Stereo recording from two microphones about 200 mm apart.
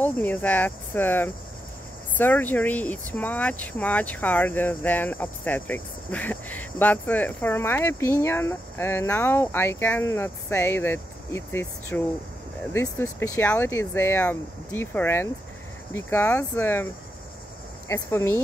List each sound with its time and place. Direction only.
0.0 s speech: 10° left (ahead or behind)